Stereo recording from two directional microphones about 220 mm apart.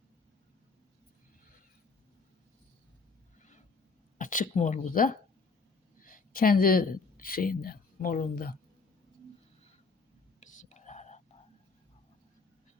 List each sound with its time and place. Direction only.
4.2 s speech: 35° left (ahead or behind)
10.6 s whispering: 35° left (ahead or behind)